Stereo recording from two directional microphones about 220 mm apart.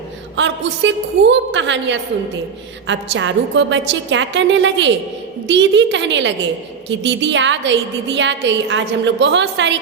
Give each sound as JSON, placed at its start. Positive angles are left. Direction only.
{"t": 0.3, "sound": "a woman's voice", "side_deg": -55}